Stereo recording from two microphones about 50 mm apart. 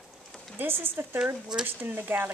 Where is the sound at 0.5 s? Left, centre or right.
Right.